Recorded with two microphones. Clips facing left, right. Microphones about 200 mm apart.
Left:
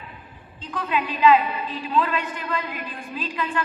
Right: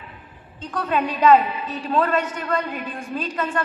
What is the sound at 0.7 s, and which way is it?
A woman's voice, 45° right (ahead or behind).